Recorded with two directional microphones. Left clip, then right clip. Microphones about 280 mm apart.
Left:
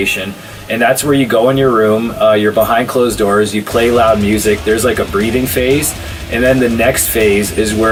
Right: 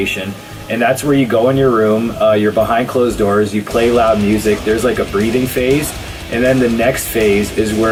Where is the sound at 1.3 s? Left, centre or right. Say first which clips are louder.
Left 2 dB; centre.